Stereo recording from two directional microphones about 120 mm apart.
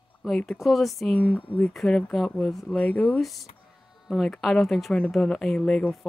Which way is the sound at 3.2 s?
Centre (ahead or behind).